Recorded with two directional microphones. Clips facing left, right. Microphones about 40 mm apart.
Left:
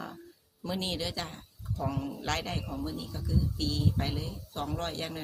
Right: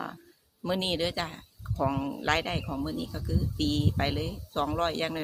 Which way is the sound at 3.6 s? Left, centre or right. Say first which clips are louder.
Right 8 dB; right.